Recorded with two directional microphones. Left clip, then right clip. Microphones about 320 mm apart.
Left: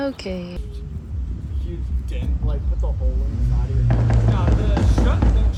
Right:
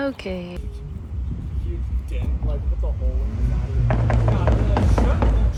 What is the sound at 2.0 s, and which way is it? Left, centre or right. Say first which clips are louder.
Speech: even; centre.